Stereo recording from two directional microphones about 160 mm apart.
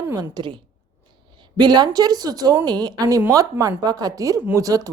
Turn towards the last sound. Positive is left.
turn(degrees=-20)  # may be behind; listen again after turning